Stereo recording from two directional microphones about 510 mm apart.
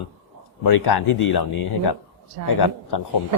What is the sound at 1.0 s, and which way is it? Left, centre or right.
Speech, left.